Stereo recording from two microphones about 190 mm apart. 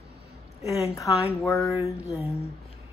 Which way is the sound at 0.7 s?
15° left (ahead or behind).